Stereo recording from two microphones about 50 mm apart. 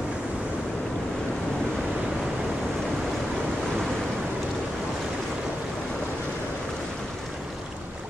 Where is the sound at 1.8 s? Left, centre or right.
Centre.